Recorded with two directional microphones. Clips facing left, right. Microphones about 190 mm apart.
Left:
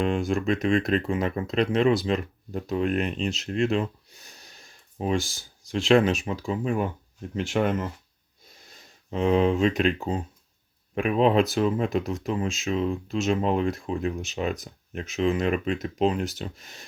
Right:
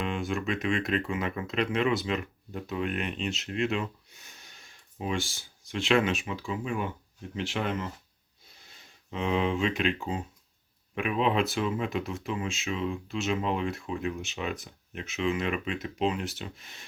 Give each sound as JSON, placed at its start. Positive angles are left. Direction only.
{"t": 0.0, "sound": "speech", "side_deg": 40}